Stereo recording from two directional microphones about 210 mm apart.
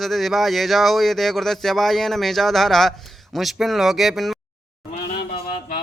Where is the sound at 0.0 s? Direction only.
Centre (ahead or behind).